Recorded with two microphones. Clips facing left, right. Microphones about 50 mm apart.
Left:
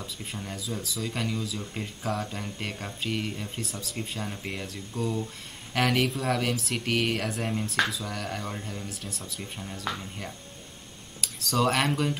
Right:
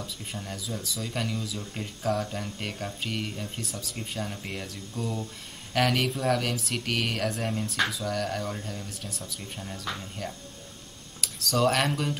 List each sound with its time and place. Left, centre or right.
0.3 s speech: centre
11.3 s speech: centre